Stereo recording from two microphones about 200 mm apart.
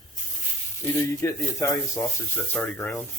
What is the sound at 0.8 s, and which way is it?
Speech, 15° left (ahead or behind).